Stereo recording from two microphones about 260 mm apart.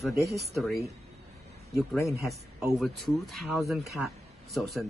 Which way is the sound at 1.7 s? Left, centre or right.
Centre.